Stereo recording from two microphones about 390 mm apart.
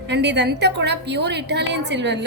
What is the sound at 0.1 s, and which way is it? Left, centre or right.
A woman's voice, right.